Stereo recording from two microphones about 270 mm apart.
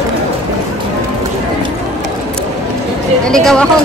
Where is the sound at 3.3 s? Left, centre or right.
Centre.